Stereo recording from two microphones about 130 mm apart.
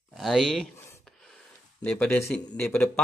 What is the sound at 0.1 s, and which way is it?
Speech, centre (ahead or behind).